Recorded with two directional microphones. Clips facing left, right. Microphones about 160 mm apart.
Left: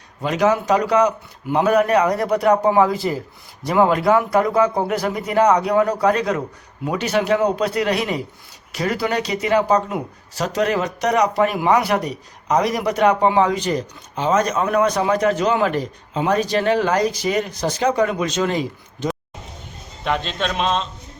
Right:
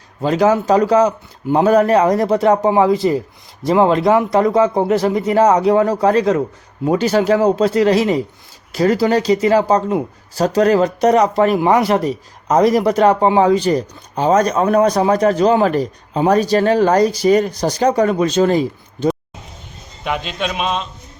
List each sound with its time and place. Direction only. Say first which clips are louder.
0.2 s a man's voice: right 4 dB; 35° right (ahead or behind)
20.1 s a man's voice: right 1 dB; 10° right (ahead or behind)